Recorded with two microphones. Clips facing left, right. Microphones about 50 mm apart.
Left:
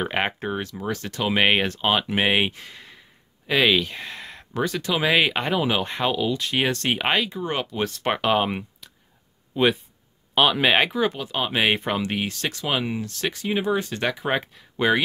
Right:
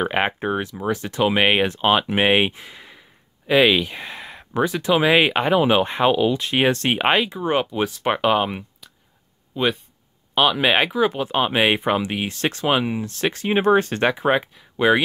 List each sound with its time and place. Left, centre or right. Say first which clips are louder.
0.0 s speech: right 4 dB; centre
11.1 s speech: right 6 dB; right
11.5 s speech: right 2 dB; centre
12.3 s speech: right 6 dB; right
12.7 s speech: right 4 dB; centre
13.3 s speech: right 7 dB; right
14.0 s speech: right 6 dB; right
14.3 s speech: right 4 dB; centre